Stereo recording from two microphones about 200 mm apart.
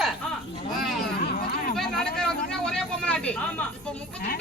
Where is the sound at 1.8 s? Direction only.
5° left (ahead or behind).